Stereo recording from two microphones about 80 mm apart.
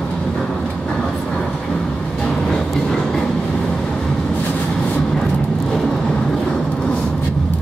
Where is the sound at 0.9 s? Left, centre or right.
Centre.